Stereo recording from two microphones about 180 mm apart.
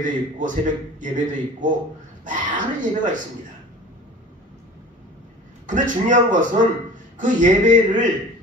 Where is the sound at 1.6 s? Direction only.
45° right (ahead or behind).